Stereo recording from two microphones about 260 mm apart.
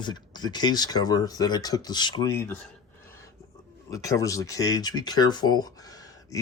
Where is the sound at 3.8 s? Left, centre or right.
Centre.